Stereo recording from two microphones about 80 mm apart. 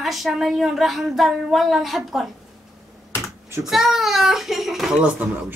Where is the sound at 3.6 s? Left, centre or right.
Centre.